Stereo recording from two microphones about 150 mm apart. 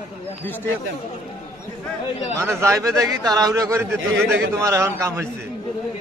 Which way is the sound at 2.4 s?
20° right (ahead or behind).